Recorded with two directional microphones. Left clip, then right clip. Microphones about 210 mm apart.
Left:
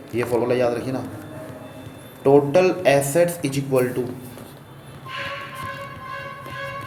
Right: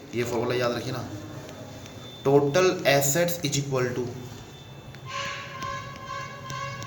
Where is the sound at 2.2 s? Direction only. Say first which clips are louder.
Left 5 dB; 30° left (ahead or behind).